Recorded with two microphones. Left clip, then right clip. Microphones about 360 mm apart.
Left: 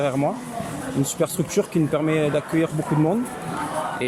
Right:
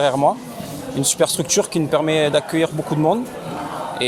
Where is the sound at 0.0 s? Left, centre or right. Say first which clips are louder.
Right 7 dB; right.